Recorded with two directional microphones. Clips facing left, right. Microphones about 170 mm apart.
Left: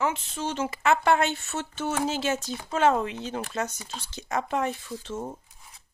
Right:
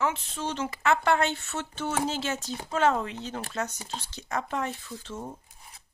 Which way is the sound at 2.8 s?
15° left (ahead or behind).